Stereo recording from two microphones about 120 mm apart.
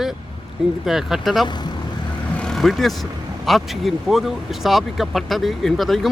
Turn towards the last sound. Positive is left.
turn(degrees=0)  # may be behind; listen again after turning